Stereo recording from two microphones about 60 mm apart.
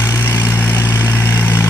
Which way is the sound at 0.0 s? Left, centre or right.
Left.